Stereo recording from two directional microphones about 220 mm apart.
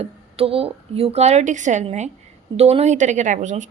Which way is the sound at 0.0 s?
25° right (ahead or behind).